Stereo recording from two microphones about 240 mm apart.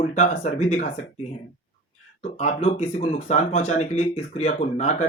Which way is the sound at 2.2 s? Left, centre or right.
Left.